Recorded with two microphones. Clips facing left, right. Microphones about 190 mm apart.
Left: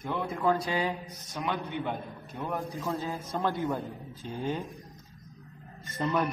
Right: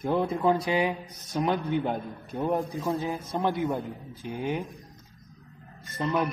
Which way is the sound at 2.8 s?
15° right (ahead or behind).